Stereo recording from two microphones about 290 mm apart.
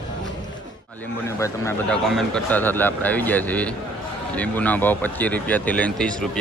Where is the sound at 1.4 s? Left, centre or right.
Centre.